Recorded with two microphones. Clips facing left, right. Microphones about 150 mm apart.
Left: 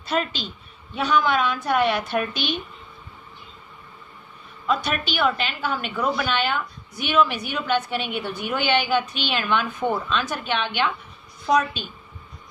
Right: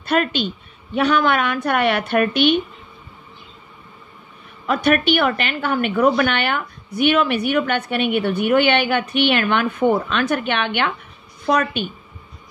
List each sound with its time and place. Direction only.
0.0 s a woman's voice: 65° right (ahead or behind)
4.6 s a woman's voice: 60° right (ahead or behind)